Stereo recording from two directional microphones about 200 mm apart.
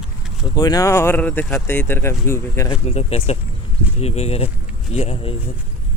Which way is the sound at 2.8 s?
30° left (ahead or behind).